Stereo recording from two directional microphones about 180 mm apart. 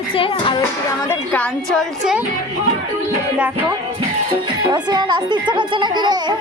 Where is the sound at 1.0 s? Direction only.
10° left (ahead or behind).